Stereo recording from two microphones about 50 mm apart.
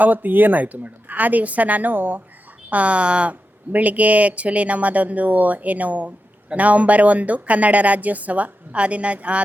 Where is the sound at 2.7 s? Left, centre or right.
Right.